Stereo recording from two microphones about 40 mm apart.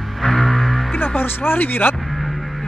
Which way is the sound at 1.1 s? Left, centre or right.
Left.